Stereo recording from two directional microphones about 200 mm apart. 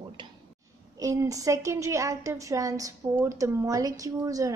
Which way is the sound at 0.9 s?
15° right (ahead or behind).